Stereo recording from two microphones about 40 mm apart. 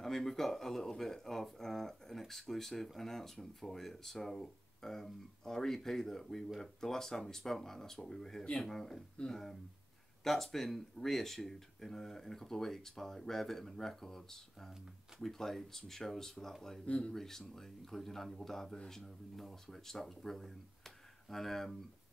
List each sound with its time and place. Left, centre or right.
0.0 s speech: centre
16.8 s speech: left
17.1 s speech: centre